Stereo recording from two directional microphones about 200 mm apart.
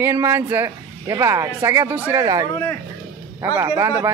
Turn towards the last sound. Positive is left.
turn(degrees=-15)  # may be behind; listen again after turning